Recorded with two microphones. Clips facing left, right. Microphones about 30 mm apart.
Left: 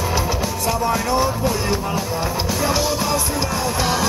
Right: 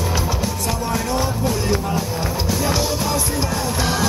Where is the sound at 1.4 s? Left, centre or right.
Left.